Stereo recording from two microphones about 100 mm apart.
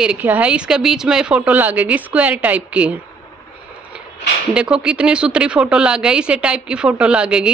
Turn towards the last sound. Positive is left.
turn(degrees=-10)  # may be behind; listen again after turning